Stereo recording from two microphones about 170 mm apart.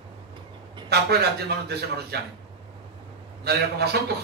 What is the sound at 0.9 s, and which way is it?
Speech, 70° right (ahead or behind).